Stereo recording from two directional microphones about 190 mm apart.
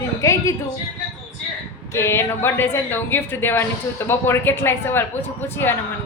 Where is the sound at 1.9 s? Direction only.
15° left (ahead or behind).